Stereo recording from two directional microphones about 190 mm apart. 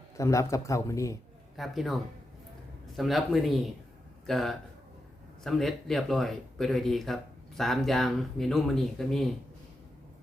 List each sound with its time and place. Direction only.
0.2 s a man's voice: 15° left (ahead or behind)
1.5 s speech: centre (ahead or behind)